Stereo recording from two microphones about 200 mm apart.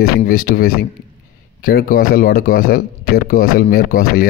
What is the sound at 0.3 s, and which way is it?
Speech, 45° left (ahead or behind).